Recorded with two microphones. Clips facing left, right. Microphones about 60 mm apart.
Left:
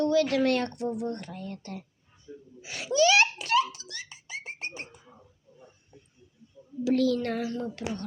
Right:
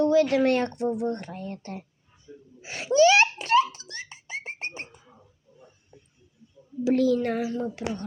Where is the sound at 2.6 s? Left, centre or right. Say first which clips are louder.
Right 5 dB; right.